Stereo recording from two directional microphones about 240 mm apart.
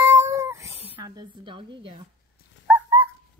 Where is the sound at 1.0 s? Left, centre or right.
Centre.